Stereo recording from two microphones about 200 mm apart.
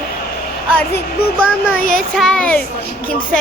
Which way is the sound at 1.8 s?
45° left (ahead or behind).